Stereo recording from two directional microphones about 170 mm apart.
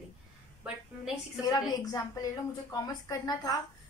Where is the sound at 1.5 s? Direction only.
20° left (ahead or behind).